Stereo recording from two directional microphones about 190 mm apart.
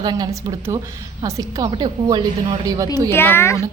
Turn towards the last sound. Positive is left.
turn(degrees=15)  # may be behind; listen again after turning